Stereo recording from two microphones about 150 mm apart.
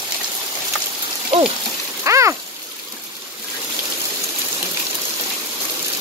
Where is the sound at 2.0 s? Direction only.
20° right (ahead or behind).